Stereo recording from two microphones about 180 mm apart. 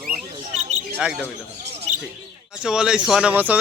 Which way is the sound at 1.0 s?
5° right (ahead or behind).